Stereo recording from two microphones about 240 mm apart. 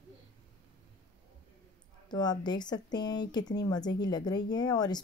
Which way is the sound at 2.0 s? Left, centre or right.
Centre.